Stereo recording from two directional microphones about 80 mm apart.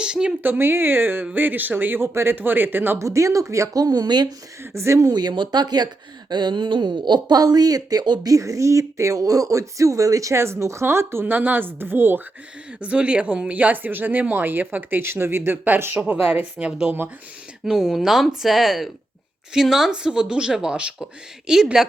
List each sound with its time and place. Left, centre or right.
0.0 s speech: centre
0.4 s speech: right
3.0 s speech: right
4.7 s speech: right
5.1 s speech: right
8.3 s speech: right
12.8 s speech: centre